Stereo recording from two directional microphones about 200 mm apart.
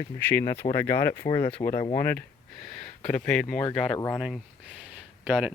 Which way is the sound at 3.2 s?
5° left (ahead or behind).